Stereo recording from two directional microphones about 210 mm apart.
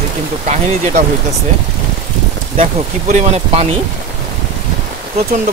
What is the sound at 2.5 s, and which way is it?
Speech, 30° right (ahead or behind).